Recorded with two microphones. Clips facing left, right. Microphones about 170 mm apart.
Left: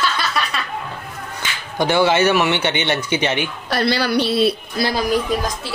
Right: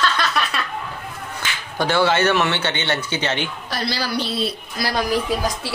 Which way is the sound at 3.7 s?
60° left (ahead or behind).